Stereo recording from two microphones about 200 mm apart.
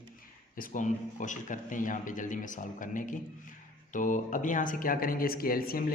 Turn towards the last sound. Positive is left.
turn(degrees=50)  # may be behind; listen again after turning